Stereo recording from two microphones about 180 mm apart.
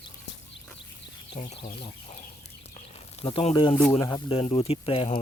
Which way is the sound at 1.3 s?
35° left (ahead or behind).